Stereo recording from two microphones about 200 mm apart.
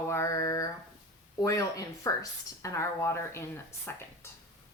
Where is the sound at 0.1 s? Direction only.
15° left (ahead or behind).